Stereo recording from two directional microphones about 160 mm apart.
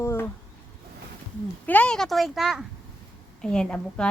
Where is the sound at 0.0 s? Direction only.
15° left (ahead or behind).